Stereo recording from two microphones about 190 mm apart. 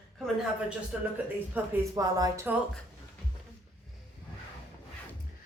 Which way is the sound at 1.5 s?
20° right (ahead or behind).